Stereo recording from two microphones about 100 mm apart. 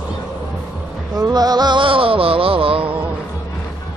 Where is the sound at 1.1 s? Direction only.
40° right (ahead or behind); by 2.9 s 65° right (ahead or behind).